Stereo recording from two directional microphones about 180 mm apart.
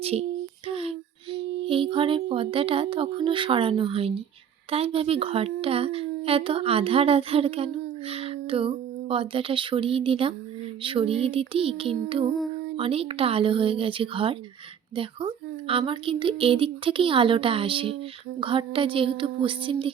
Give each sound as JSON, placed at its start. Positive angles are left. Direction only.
{"t": 0.0, "sound": "a child's voice", "side_deg": -35}